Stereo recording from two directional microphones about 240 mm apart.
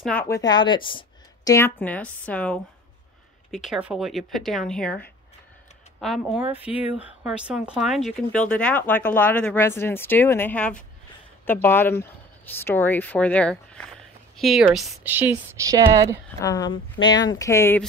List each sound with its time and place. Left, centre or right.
0.0 s a woman's voice: centre
16.3 s a woman's voice: centre